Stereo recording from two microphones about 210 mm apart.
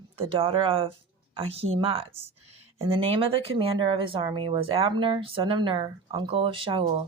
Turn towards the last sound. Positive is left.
turn(degrees=-25)  # may be behind; listen again after turning